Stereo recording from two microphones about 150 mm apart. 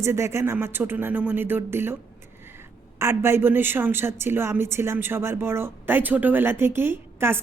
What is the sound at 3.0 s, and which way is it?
A woman's voice, 15° right (ahead or behind).